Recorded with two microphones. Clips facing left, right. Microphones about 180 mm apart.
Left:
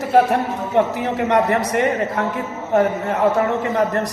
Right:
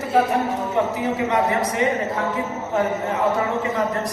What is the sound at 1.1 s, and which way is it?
Speech, 65° left (ahead or behind).